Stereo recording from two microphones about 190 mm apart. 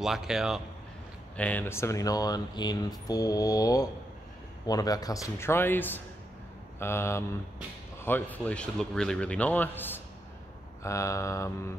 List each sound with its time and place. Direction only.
0.0 s speech: 5° right (ahead or behind)
1.3 s speech: 5° left (ahead or behind)